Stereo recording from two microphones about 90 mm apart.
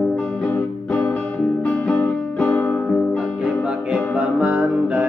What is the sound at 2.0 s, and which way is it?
Music, 15° left (ahead or behind).